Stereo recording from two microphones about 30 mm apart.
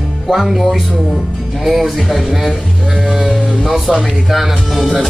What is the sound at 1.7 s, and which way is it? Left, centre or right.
Music, centre.